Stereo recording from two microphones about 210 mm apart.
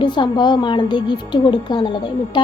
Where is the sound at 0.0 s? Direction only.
20° left (ahead or behind).